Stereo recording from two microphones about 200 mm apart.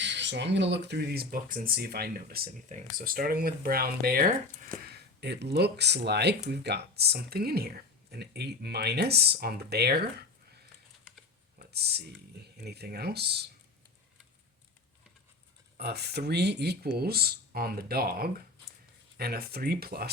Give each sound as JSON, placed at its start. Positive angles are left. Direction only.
{"t": 0.0, "sound": "speech", "side_deg": -60}
{"t": 11.6, "sound": "speech", "side_deg": -55}
{"t": 15.8, "sound": "speech", "side_deg": -55}